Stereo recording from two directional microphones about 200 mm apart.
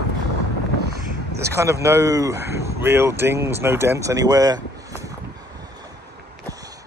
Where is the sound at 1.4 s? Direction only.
15° right (ahead or behind).